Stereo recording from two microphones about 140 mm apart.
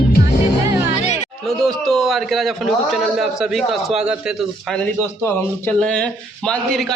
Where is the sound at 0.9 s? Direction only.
55° left (ahead or behind).